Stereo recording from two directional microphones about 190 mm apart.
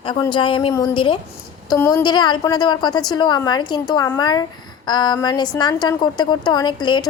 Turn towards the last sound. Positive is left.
turn(degrees=25)  # may be behind; listen again after turning